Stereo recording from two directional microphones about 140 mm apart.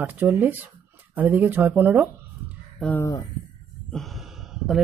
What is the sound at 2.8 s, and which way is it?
Speech, 15° left (ahead or behind).